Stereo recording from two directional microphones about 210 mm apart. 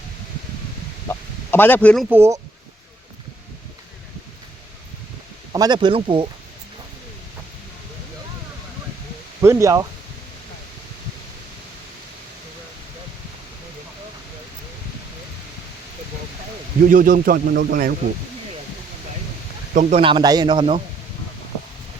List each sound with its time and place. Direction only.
1.0 s speech: 10° left (ahead or behind)
2.0 s speech: 10° right (ahead or behind)
5.5 s a man's voice: 20° right (ahead or behind)
9.4 s speech: 15° right (ahead or behind)
16.8 s speech: 40° right (ahead or behind)
19.7 s speech: 40° right (ahead or behind)
20.0 s a man's voice: 25° right (ahead or behind)